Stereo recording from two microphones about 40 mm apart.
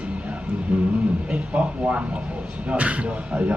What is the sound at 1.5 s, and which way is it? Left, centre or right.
Speech, right.